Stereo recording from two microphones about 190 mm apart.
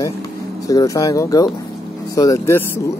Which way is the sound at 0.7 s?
20° left (ahead or behind).